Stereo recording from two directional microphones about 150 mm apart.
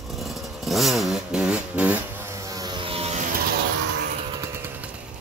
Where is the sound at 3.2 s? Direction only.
80° right.